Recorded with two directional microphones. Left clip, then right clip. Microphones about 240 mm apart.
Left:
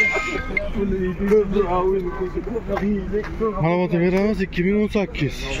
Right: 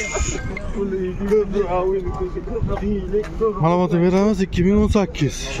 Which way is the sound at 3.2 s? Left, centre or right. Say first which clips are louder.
Right 4 dB; centre.